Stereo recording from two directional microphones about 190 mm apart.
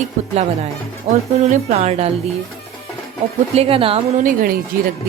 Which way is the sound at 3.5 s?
30° right (ahead or behind).